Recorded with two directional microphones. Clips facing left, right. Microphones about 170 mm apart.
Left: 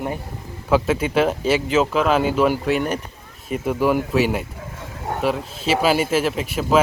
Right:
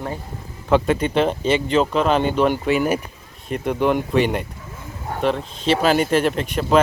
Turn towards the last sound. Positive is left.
turn(degrees=5)  # may be behind; listen again after turning